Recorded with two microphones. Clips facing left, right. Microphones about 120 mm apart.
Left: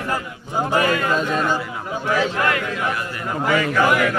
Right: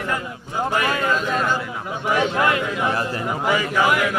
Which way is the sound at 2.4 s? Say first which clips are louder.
Right 1 dB; 20° right (ahead or behind).